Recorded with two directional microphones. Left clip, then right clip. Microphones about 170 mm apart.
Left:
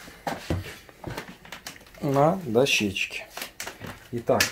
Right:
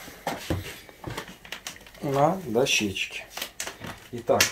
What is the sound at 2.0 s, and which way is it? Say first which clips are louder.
Speech: left 1 dB; 50° left (ahead or behind).